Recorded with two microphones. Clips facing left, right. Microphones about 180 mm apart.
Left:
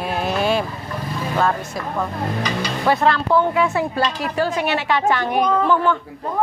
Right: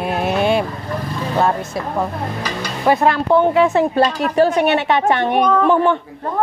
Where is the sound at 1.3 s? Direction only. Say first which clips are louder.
Right 3 dB; 25° right (ahead or behind).